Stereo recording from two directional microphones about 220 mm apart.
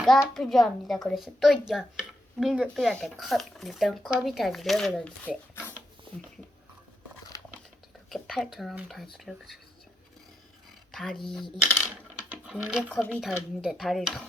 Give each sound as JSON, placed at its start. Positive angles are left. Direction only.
{"t": 0.3, "sound": "speech", "side_deg": 0}
{"t": 7.3, "sound": "a sound", "side_deg": 15}
{"t": 8.1, "sound": "speech", "side_deg": 0}
{"t": 10.9, "sound": "speech", "side_deg": 0}
{"t": 11.6, "sound": "coin", "side_deg": 5}
{"t": 12.3, "sound": "speech", "side_deg": -5}